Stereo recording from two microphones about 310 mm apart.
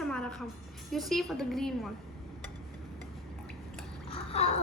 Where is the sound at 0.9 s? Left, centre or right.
Centre.